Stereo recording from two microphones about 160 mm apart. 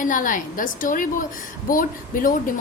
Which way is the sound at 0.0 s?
55° left (ahead or behind).